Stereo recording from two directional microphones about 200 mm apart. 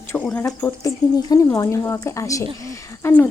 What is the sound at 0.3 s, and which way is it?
Speech, 10° left (ahead or behind).